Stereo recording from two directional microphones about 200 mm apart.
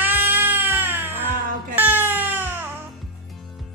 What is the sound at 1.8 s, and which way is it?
Music, 10° right (ahead or behind).